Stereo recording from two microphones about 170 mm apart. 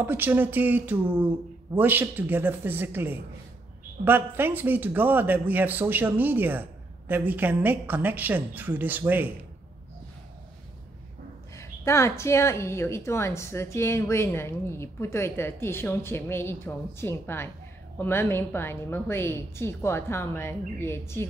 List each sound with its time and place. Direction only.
0.0 s a man's voice: 10° right (ahead or behind)
11.5 s a woman's voice: 15° left (ahead or behind)